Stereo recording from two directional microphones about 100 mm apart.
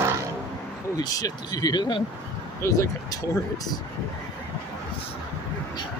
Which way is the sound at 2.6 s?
35° left (ahead or behind).